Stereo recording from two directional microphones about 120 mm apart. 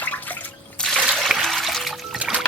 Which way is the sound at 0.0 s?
15° left (ahead or behind).